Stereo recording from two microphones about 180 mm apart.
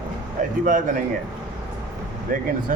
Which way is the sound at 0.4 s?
45° right (ahead or behind).